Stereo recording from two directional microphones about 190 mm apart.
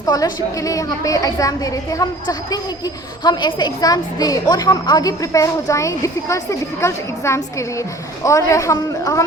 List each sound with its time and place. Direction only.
0.0 s a woman's voice: 20° left (ahead or behind)